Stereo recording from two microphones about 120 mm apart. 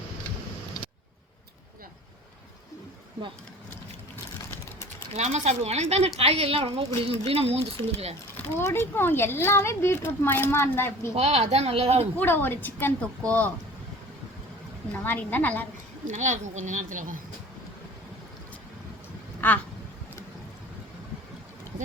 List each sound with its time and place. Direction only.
5.1 s speech: 70° right (ahead or behind)
8.5 s speech: 20° left (ahead or behind)
11.1 s speech: 60° right (ahead or behind)
12.1 s a woman's voice: 15° left (ahead or behind)
14.9 s a woman's voice: 15° left (ahead or behind)
16.0 s speech: 90° right
19.4 s speech: 15° left (ahead or behind)